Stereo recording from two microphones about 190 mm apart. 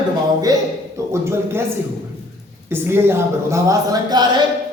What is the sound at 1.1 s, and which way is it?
Speech, 15° right (ahead or behind).